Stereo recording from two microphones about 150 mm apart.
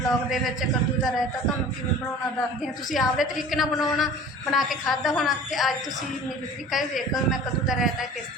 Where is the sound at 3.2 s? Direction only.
Centre (ahead or behind).